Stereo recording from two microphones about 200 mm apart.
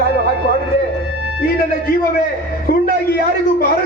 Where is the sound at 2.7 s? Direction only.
50° left (ahead or behind).